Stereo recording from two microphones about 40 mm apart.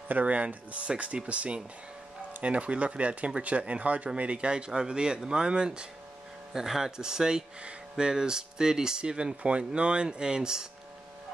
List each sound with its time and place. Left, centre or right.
0.1 s speech: right; by 10.7 s centre